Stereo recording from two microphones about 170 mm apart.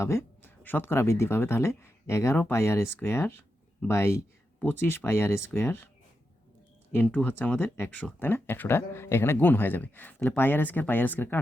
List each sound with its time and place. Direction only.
0.0 s speech: 15° left (ahead or behind)
6.9 s speech: 10° left (ahead or behind)